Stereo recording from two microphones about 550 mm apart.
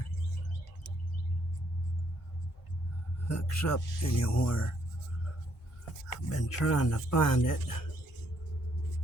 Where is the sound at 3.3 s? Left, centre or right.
Left.